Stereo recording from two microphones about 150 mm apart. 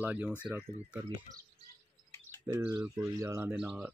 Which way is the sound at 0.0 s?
10° right (ahead or behind).